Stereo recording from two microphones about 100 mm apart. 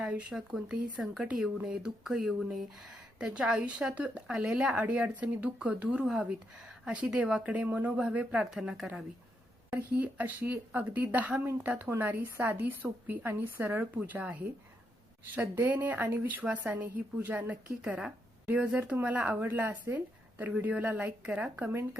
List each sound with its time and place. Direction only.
0.0 s speech: 10° right (ahead or behind)
15.4 s speech: 20° right (ahead or behind)